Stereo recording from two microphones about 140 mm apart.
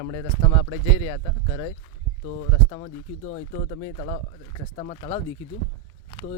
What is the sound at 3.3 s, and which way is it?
Speech, 50° left (ahead or behind).